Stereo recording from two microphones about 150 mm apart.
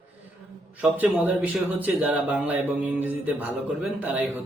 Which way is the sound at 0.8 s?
10° right (ahead or behind).